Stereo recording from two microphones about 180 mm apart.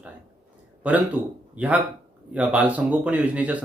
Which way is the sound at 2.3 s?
10° right (ahead or behind).